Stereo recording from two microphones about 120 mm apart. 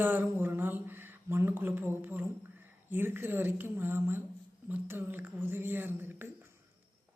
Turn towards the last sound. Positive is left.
turn(degrees=-15)  # may be behind; listen again after turning